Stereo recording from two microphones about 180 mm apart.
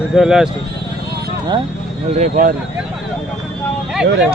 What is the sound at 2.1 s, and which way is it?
Speech, 45° right (ahead or behind).